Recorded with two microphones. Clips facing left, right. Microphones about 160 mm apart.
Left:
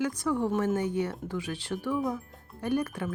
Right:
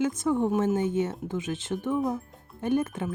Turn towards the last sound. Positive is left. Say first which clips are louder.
# right 3 dB
turn(degrees=-25)  # may be behind; listen again after turning